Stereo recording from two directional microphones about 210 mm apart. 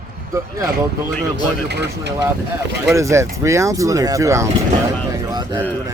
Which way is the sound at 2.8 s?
15° right (ahead or behind).